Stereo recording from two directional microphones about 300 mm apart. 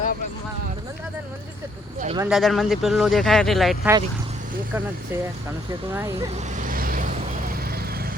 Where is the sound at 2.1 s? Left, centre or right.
Centre.